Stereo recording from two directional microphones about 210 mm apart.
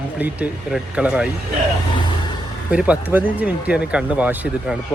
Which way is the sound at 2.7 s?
5° right (ahead or behind).